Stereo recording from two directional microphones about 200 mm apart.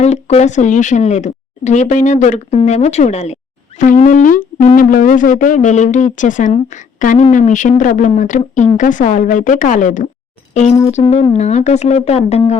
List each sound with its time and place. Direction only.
0.0 s speech: 35° left (ahead or behind)
4.8 s speech: 45° left (ahead or behind)
10.5 s a sound: 35° left (ahead or behind)
10.8 s speech: 30° left (ahead or behind)